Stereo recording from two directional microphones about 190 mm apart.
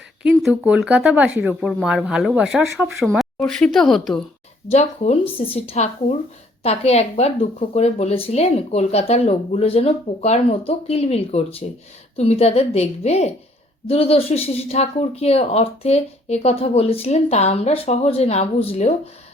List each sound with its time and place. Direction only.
0.2 s speech: 5° right (ahead or behind)
4.7 s speech: 35° left (ahead or behind)